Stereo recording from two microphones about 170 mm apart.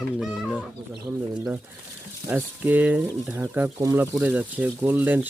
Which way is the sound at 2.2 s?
10° right (ahead or behind).